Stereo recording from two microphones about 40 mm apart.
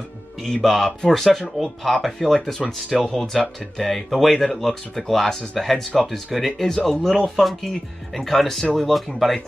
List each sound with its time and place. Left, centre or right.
0.4 s speech: centre